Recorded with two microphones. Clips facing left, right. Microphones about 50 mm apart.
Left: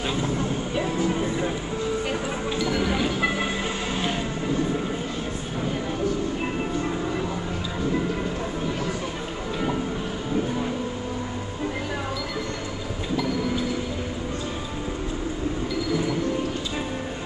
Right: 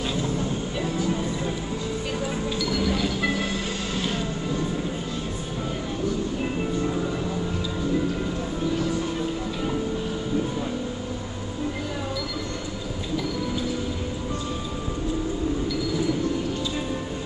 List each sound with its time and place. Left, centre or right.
0.7 s music: left
2.6 s music: left
3.9 s vehicle: left